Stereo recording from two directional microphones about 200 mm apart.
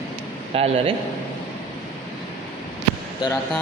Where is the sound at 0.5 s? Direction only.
30° right (ahead or behind).